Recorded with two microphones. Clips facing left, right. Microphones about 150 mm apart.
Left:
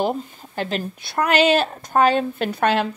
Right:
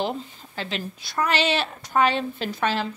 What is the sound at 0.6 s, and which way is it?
A woman's voice, 50° left (ahead or behind).